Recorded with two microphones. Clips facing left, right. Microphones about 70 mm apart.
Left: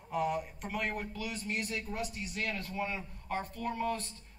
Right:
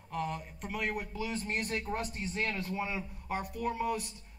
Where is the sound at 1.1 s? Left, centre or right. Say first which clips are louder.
Right 3 dB; right.